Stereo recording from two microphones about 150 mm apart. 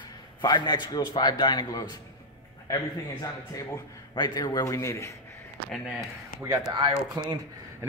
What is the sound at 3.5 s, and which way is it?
A man's voice, 25° left (ahead or behind).